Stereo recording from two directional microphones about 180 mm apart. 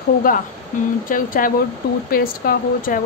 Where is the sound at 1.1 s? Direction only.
50° left (ahead or behind).